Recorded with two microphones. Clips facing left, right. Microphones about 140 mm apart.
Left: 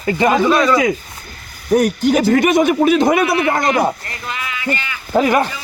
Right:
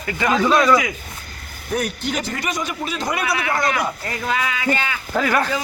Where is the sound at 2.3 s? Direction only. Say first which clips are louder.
Left 13 dB; 60° left (ahead or behind).